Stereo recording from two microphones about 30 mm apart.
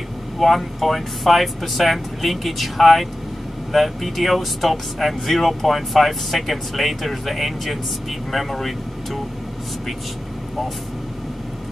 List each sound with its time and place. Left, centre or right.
0.4 s speech: centre